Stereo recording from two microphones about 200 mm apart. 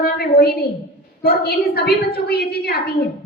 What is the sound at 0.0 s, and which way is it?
A woman's voice, 50° left (ahead or behind).